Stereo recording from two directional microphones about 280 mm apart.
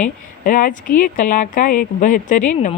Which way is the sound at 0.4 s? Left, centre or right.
Left.